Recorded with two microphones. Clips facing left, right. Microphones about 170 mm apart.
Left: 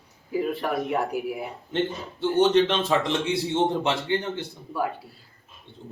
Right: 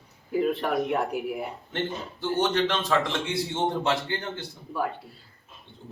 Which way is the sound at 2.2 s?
25° left (ahead or behind).